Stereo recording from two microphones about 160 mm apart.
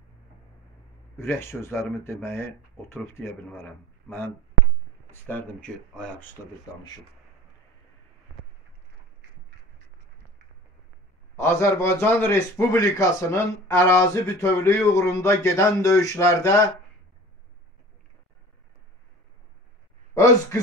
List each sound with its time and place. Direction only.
1.1 s a man's voice: 15° left (ahead or behind)
11.3 s a man's voice: 15° left (ahead or behind)